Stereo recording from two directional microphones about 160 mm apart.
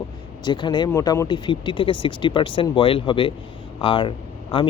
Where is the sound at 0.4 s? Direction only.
30° left (ahead or behind).